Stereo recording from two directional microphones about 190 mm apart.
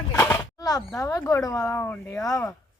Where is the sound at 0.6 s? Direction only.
20° left (ahead or behind).